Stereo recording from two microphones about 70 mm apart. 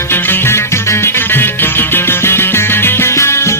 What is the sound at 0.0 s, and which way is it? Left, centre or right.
Music, left.